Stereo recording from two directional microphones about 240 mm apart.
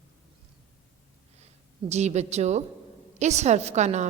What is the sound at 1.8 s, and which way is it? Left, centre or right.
A woman's voice, right.